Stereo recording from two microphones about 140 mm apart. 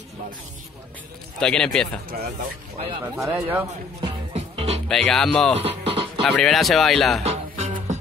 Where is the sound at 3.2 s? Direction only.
10° right (ahead or behind).